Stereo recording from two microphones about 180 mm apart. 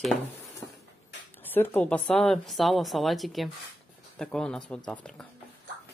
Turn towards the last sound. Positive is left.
turn(degrees=5)  # may be behind; listen again after turning